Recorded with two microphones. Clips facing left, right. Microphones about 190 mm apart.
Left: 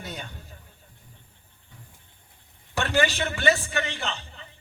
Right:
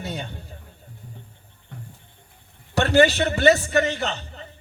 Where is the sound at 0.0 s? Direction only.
25° right (ahead or behind).